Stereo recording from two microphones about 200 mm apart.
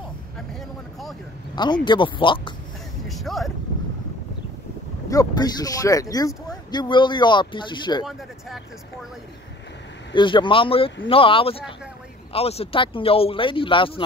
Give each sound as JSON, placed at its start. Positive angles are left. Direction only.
{"t": 0.5, "sound": "vehicle", "side_deg": 0}
{"t": 1.5, "sound": "speech", "side_deg": 20}
{"t": 3.1, "sound": "vehicle", "side_deg": 0}
{"t": 5.1, "sound": "speech", "side_deg": 20}
{"t": 8.0, "sound": "speech", "side_deg": 0}
{"t": 10.1, "sound": "speech", "side_deg": 25}